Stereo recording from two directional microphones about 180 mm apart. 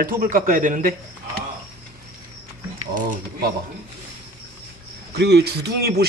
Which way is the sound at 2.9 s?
50° right (ahead or behind).